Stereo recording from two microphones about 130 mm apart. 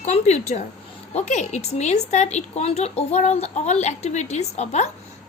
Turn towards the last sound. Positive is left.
turn(degrees=60)  # may be behind; listen again after turning